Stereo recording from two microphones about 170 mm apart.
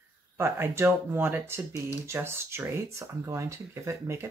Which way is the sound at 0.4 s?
15° right (ahead or behind).